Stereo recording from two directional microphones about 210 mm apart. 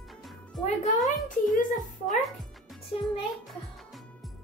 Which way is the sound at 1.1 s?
40° left (ahead or behind).